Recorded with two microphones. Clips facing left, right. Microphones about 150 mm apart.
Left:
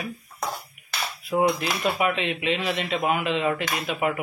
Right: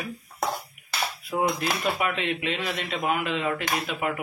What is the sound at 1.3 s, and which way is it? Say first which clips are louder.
Speech: left 4 dB; 5° left (ahead or behind).